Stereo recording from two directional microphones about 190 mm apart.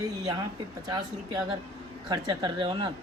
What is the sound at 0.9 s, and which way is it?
Speech, 20° right (ahead or behind).